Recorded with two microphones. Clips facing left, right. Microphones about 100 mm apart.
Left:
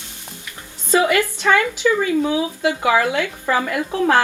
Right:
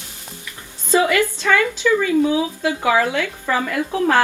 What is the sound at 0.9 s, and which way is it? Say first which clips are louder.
Speech: even; 20° left (ahead or behind).